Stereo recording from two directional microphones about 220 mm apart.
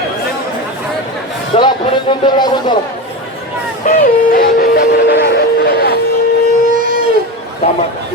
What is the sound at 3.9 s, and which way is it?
Music, 40° left (ahead or behind).